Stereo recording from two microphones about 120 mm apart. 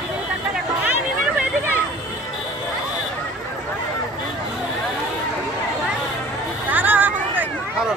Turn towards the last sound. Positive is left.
turn(degrees=-15)  # may be behind; listen again after turning